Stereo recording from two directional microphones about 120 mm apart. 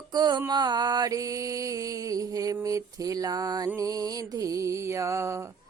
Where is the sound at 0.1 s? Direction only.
35° right (ahead or behind).